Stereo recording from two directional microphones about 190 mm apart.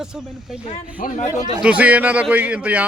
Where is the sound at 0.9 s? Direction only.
40° left (ahead or behind).